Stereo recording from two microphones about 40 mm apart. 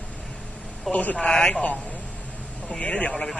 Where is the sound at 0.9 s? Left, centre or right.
Left.